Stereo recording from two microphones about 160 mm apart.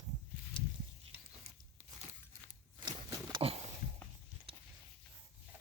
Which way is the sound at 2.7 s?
30° right (ahead or behind).